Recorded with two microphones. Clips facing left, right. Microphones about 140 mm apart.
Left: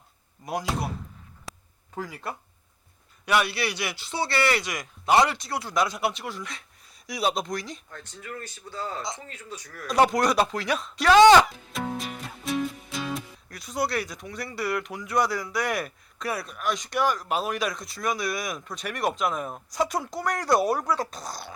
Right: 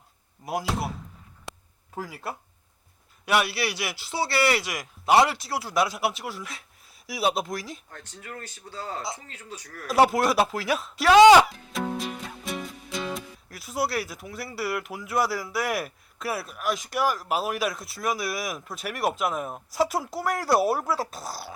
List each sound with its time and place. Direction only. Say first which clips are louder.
0.4 s speech: right 1 dB; 5° right (ahead or behind)
1.5 s a sound: right 1 dB; centre (ahead or behind)
2.0 s speech: even; 5° right (ahead or behind)
7.9 s speech: left 2 dB; 40° right (ahead or behind)
9.9 s speech: right 1 dB; 5° right (ahead or behind)